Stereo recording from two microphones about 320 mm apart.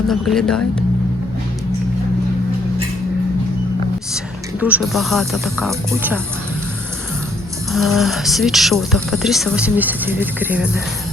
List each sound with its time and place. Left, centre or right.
0.1 s speech: centre
4.6 s speech: centre
7.7 s speech: centre